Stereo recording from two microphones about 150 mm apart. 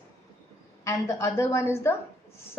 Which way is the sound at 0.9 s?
20° left (ahead or behind).